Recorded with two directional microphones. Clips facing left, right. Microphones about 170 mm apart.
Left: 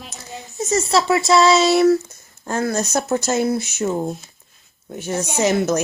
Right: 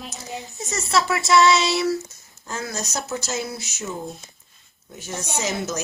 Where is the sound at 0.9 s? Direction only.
25° left (ahead or behind).